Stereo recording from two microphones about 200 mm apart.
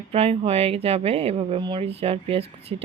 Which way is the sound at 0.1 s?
30° right (ahead or behind).